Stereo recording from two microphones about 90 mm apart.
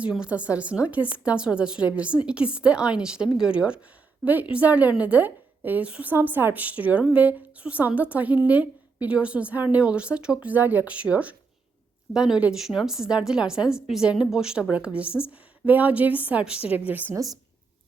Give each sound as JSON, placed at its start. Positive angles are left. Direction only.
{"t": 0.0, "sound": "a woman's voice", "side_deg": -10}